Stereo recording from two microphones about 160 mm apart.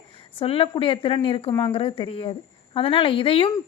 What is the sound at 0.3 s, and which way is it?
A woman's voice, 35° left (ahead or behind).